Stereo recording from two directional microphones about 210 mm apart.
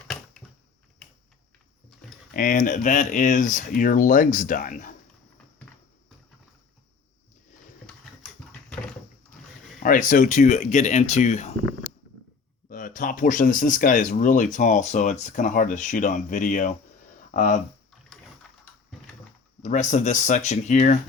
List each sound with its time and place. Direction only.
0.4 s a sound: 5° left (ahead or behind)
2.3 s speech: 40° left (ahead or behind)
9.8 s speech: 40° left (ahead or behind)
12.6 s speech: 40° left (ahead or behind)
19.6 s speech: 35° left (ahead or behind)